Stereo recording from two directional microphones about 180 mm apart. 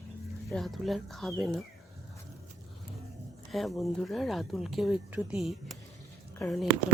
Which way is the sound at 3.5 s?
Centre (ahead or behind).